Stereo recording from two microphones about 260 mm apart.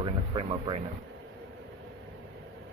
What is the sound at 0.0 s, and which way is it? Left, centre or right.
Music, centre.